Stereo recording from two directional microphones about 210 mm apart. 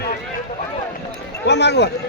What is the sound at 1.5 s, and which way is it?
Speech, 55° left (ahead or behind).